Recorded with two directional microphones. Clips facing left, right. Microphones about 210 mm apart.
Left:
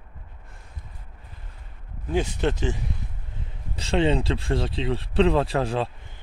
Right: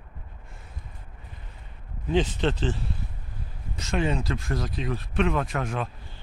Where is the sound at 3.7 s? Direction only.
30° left (ahead or behind).